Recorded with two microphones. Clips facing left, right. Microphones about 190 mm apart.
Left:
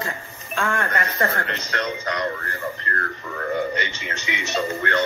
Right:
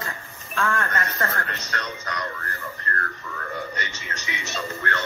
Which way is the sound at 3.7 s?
45° right (ahead or behind).